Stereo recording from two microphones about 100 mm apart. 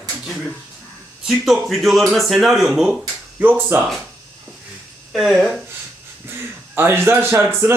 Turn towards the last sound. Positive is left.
turn(degrees=-25)  # may be behind; listen again after turning